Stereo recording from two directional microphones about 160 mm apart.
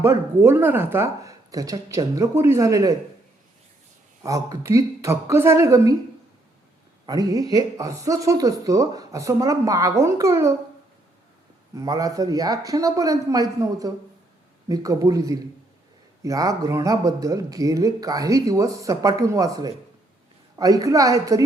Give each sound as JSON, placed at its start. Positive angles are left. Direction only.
{"t": 0.0, "sound": "speech", "side_deg": -15}
{"t": 4.2, "sound": "speech", "side_deg": -20}
{"t": 7.0, "sound": "speech", "side_deg": -25}
{"t": 11.7, "sound": "speech", "side_deg": -20}